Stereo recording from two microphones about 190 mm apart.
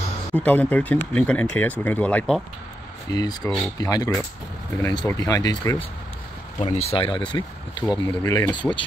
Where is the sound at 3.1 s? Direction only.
20° left (ahead or behind).